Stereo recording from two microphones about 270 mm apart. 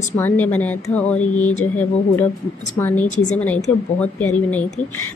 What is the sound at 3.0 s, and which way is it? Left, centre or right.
Speech, left.